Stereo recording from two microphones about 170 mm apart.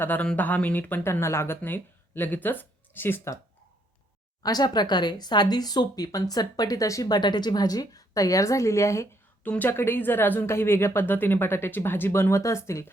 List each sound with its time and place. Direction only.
0.0 s speech: 10° left (ahead or behind)
4.4 s speech: 25° left (ahead or behind)